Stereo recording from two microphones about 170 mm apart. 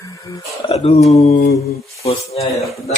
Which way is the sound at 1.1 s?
40° left (ahead or behind).